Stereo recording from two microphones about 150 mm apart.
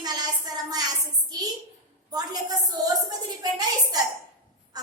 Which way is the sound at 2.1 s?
25° right (ahead or behind).